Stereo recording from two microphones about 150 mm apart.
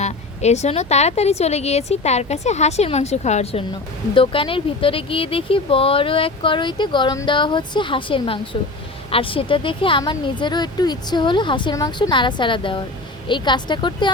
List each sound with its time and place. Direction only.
0.0 s a woman's voice: 45° left (ahead or behind)
4.1 s speech: 35° left (ahead or behind)